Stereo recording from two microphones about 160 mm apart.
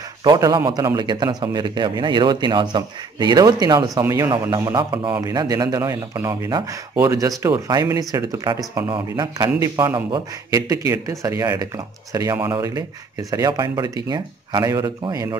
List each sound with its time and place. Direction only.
0.2 s speech: 25° right (ahead or behind)